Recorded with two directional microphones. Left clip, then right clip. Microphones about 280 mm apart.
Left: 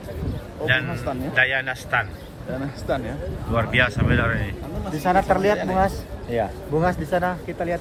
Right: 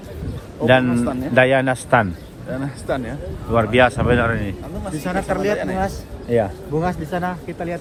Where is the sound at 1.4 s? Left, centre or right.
Centre.